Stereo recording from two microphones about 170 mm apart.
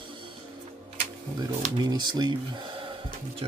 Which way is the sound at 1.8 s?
25° right (ahead or behind).